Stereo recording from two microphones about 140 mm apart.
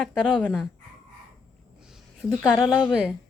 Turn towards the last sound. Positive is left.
turn(degrees=-5)  # may be behind; listen again after turning